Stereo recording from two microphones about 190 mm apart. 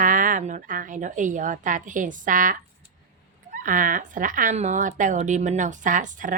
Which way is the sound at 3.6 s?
45° right (ahead or behind).